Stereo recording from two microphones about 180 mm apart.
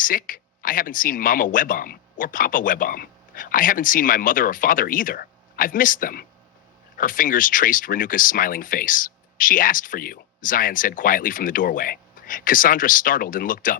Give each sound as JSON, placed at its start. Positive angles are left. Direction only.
{"t": 0.0, "sound": "speech", "side_deg": 50}